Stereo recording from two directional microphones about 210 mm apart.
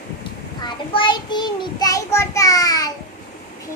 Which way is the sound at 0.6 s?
20° left (ahead or behind).